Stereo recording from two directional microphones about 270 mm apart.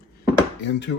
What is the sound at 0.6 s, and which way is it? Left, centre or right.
Speech, left.